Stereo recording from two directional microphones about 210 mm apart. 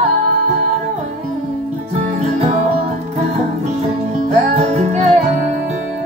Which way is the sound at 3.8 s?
30° right (ahead or behind).